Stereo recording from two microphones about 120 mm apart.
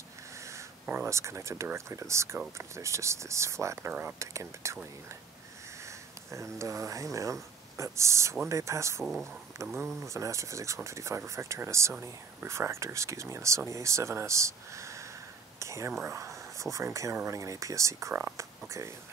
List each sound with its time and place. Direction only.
0.8 s speech: 20° right (ahead or behind)
6.3 s speech: 25° right (ahead or behind)
10.0 s speech: 25° right (ahead or behind)
15.6 s whispering: 25° right (ahead or behind)
16.0 s a sound: 25° right (ahead or behind)
16.7 s speech: 25° right (ahead or behind)